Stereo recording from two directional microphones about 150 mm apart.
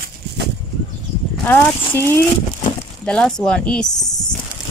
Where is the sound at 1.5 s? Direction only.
15° left (ahead or behind).